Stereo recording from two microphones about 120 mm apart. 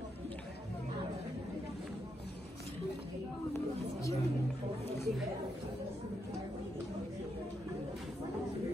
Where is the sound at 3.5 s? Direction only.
25° left (ahead or behind).